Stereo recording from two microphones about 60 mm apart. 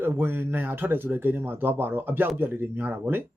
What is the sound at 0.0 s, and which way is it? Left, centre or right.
Speech, right.